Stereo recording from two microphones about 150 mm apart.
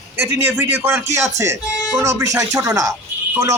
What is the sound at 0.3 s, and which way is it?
A man's voice, 15° right (ahead or behind).